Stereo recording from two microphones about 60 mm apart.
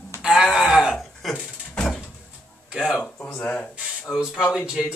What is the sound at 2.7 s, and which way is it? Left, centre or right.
Speech, centre.